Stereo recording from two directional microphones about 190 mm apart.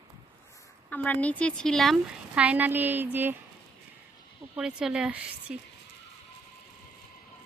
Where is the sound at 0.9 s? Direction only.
10° left (ahead or behind).